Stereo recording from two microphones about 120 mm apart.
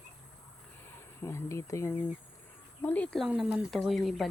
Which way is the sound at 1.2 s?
25° left (ahead or behind).